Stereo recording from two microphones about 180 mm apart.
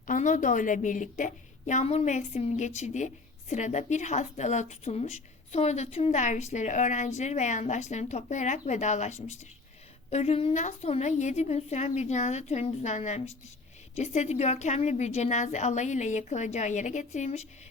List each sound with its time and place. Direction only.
0.1 s a woman's voice: 45° left (ahead or behind)